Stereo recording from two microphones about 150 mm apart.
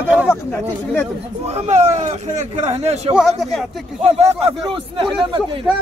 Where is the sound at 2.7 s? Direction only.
45° right (ahead or behind).